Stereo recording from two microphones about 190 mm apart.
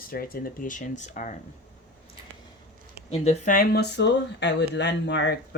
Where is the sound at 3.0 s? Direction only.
35° left (ahead or behind); by 5.3 s 65° left (ahead or behind).